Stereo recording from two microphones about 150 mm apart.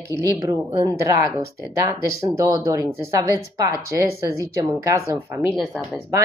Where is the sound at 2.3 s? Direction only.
20° right (ahead or behind).